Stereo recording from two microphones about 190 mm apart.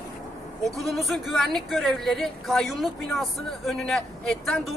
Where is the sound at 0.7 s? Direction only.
Centre (ahead or behind).